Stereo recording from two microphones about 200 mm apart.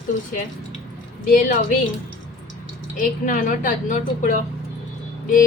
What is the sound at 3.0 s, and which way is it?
A woman's voice, 40° left (ahead or behind).